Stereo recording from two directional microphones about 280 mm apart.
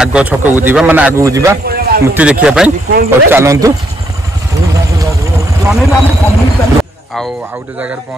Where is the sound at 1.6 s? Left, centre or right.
Right.